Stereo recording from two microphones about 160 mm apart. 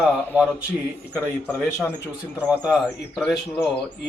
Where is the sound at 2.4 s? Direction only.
5° right (ahead or behind).